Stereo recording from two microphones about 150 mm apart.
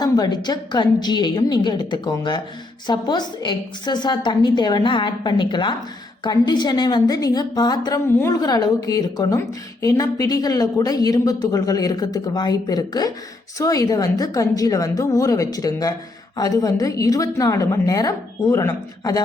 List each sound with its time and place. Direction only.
0.0 s speech: 30° left (ahead or behind)